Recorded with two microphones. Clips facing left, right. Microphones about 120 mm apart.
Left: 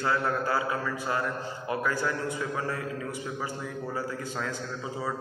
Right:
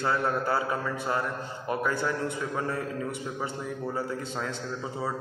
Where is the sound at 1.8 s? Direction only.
20° right (ahead or behind).